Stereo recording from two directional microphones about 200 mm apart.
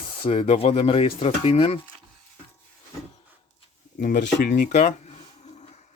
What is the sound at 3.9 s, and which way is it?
Speech, 40° left (ahead or behind).